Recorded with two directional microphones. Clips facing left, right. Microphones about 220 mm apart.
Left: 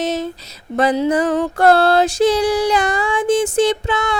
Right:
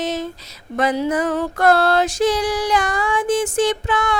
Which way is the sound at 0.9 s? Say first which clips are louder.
Left 3 dB; 30° left (ahead or behind).